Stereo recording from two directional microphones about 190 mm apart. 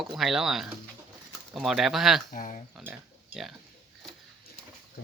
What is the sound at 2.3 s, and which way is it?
Speech, 40° left (ahead or behind).